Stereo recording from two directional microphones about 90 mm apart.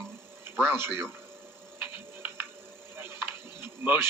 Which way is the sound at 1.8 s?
20° right (ahead or behind).